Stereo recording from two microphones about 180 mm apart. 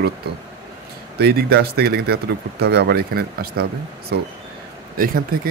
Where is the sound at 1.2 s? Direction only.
60° right (ahead or behind).